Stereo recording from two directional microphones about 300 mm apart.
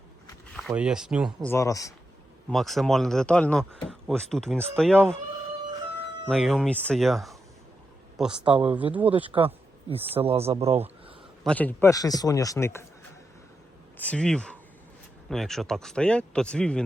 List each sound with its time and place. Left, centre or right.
0.7 s speech: centre
2.5 s speech: centre
6.2 s speech: centre
10.2 s speech: centre
11.4 s a man's voice: centre
14.0 s speech: centre